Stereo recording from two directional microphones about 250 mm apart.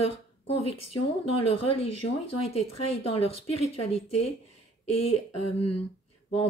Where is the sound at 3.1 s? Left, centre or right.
Left.